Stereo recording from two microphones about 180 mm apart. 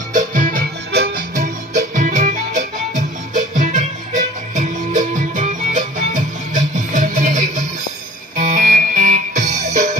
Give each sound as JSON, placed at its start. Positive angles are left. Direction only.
{"t": 0.1, "sound": "music", "side_deg": -45}
{"t": 0.9, "sound": "music", "side_deg": -65}
{"t": 1.4, "sound": "music", "side_deg": -45}